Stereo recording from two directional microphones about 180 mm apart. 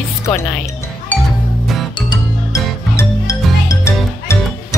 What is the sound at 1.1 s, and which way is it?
Music, 10° left (ahead or behind).